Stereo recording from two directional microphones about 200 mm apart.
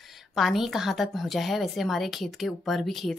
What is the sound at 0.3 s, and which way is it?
A woman's voice, centre (ahead or behind).